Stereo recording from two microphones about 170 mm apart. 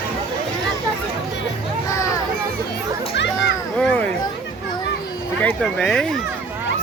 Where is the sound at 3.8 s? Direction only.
5° left (ahead or behind).